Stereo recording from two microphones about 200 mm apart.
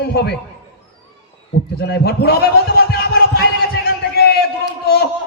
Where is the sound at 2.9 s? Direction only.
50° left (ahead or behind).